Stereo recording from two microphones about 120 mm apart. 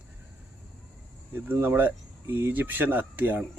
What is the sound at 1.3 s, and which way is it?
Speech, 15° right (ahead or behind).